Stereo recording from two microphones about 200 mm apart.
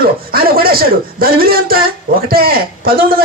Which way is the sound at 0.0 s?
50° right (ahead or behind).